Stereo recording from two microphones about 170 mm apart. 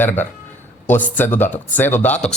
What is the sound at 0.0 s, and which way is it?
Speech, 10° left (ahead or behind).